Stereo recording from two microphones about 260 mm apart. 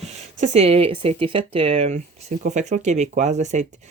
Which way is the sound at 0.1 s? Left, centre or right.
Right.